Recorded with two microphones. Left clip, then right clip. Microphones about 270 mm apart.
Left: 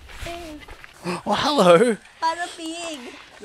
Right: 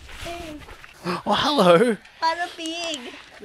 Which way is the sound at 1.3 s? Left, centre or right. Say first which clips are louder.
Left 1 dB; centre.